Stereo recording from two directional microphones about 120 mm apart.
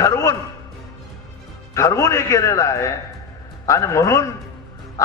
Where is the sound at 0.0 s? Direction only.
25° left (ahead or behind).